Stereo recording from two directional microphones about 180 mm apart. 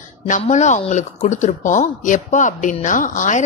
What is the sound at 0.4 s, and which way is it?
Speech, 40° left (ahead or behind).